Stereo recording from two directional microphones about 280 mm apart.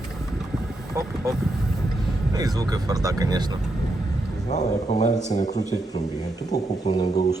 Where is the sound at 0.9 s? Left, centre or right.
Centre.